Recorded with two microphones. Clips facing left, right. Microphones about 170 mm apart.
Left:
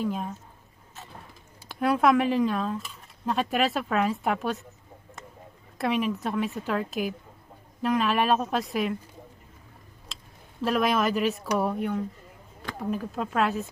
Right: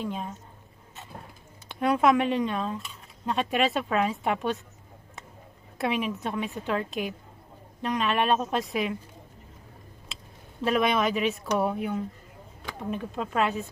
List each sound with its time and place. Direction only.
0.0 s speech: centre (ahead or behind)
1.7 s speech: centre (ahead or behind)
5.8 s speech: centre (ahead or behind)
10.6 s speech: centre (ahead or behind)